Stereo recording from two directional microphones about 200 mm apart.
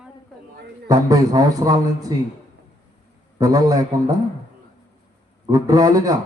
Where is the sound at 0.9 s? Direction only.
20° right (ahead or behind).